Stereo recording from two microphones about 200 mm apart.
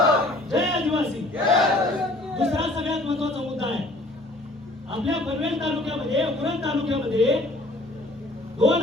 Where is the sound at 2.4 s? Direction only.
30° right (ahead or behind).